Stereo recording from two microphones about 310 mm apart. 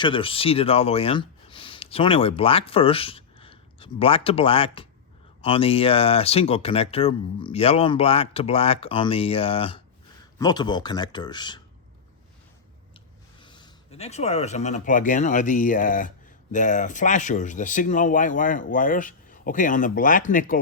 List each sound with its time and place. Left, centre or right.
0.0 s speech: centre
13.4 s speech: centre